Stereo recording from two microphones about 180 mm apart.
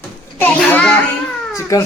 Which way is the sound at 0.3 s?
10° left (ahead or behind).